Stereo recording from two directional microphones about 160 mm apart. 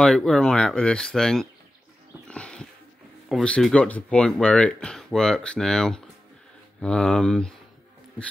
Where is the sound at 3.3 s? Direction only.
5° left (ahead or behind).